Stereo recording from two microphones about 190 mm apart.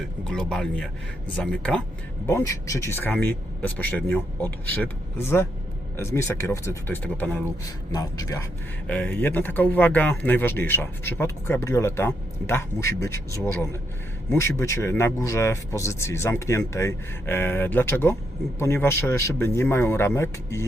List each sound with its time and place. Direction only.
0.3 s speech: 5° left (ahead or behind)
2.2 s speech: 15° left (ahead or behind)